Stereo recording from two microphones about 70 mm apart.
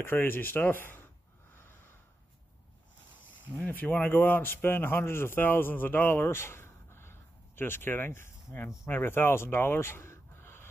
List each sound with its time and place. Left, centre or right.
0.0 s speech: left
3.6 s a man's voice: left